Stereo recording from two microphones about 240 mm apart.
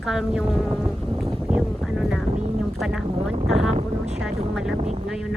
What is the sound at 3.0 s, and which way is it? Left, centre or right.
Speech, right.